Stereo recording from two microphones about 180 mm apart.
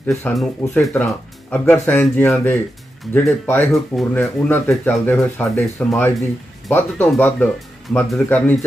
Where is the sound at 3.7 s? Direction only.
Centre (ahead or behind).